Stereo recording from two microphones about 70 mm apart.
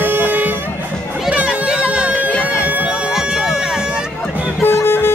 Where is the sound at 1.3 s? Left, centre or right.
Centre.